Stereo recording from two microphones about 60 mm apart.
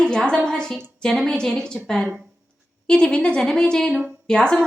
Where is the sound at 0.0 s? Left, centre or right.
Centre.